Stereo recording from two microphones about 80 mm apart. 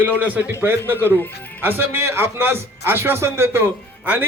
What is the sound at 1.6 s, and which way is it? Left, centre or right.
A man's voice, right.